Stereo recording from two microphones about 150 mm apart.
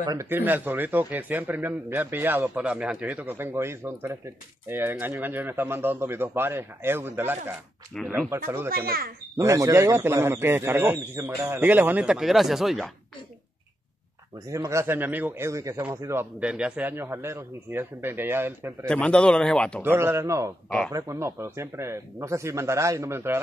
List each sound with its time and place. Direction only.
0.0 s a man's voice: 20° right (ahead or behind)
8.6 s a child's voice: 80° right
9.4 s a man's voice: 20° right (ahead or behind); by 12.9 s centre (ahead or behind)
14.5 s a man's voice: 20° right (ahead or behind)
18.9 s speech: 5° left (ahead or behind)
19.8 s a man's voice: 15° right (ahead or behind)